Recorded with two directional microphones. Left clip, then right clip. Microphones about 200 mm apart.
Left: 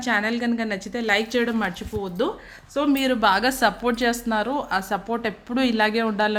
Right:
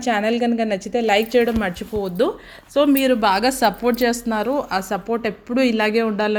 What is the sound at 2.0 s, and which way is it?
Speech, 25° right (ahead or behind).